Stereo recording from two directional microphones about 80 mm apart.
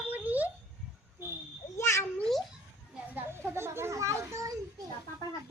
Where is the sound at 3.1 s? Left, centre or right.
Right.